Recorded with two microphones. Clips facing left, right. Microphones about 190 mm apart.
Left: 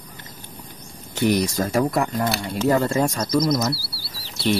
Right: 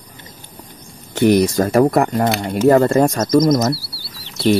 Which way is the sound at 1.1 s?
55° right (ahead or behind).